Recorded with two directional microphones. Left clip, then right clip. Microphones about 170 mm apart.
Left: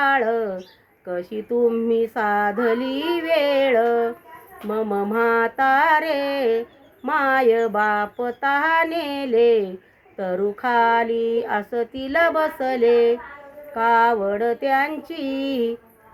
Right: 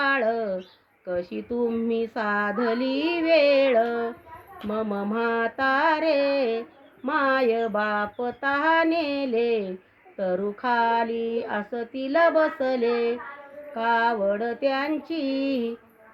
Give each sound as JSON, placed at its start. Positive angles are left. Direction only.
{"t": 0.0, "sound": "a sound", "side_deg": 20}
{"t": 1.0, "sound": "speech", "side_deg": 20}
{"t": 2.0, "sound": "music", "side_deg": 20}